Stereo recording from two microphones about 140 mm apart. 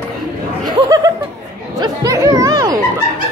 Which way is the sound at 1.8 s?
25° right (ahead or behind).